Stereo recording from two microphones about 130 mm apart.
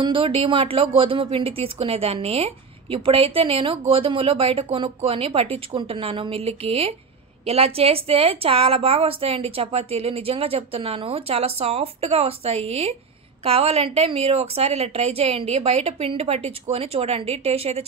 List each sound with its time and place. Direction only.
0.0 s speech: 45° right (ahead or behind)